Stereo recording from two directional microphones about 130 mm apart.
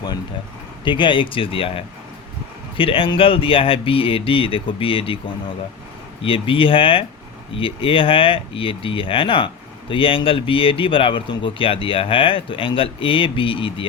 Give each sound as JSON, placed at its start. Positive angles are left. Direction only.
{"t": 0.9, "sound": "speech", "side_deg": 40}